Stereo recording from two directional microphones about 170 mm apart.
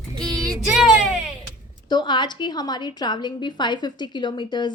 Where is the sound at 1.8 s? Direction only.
25° left (ahead or behind).